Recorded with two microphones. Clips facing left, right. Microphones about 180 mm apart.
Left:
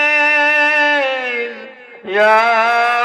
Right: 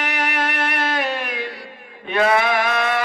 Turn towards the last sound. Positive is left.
turn(degrees=65)  # may be behind; listen again after turning